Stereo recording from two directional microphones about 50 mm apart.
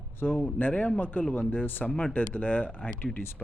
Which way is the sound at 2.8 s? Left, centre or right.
Centre.